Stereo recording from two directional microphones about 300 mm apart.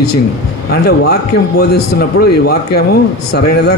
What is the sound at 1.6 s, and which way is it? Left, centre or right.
A man's voice, left.